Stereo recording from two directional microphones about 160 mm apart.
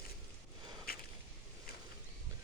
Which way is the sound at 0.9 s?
70° left (ahead or behind).